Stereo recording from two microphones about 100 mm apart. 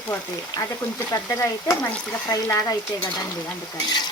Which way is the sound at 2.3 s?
35° left (ahead or behind).